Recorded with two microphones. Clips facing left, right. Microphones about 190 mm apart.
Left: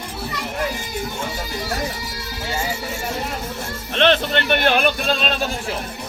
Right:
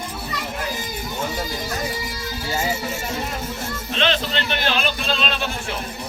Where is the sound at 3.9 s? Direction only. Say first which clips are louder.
Left 5 dB; 60° left (ahead or behind).